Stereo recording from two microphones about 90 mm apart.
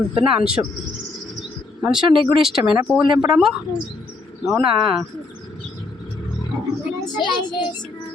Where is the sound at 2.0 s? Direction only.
70° right (ahead or behind).